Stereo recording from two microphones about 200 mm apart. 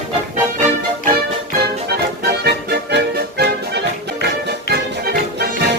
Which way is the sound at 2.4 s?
55° right (ahead or behind).